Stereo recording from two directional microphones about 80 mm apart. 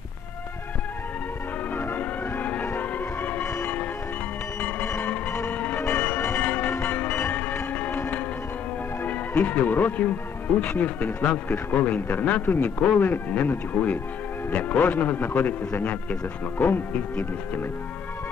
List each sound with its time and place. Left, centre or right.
1.8 s music: left
9.0 s a man's voice: centre